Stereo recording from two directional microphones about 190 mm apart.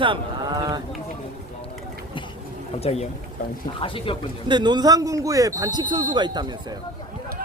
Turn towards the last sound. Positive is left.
turn(degrees=-20)  # may be behind; listen again after turning